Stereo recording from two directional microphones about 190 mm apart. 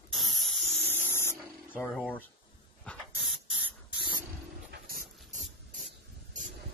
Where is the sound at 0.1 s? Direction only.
Centre (ahead or behind).